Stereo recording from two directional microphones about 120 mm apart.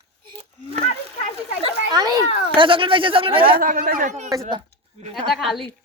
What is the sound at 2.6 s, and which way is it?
A child's voice, 45° right (ahead or behind).